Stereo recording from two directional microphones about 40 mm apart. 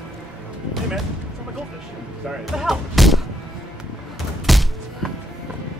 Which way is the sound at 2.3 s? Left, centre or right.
Centre.